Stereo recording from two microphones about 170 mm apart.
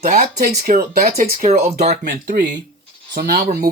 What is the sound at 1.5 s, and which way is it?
Speech, 40° right (ahead or behind).